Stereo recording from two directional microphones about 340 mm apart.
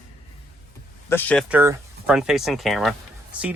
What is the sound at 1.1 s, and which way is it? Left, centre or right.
Speech, centre.